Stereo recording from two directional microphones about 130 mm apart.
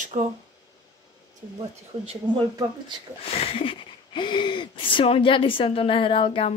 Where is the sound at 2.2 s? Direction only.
35° right (ahead or behind).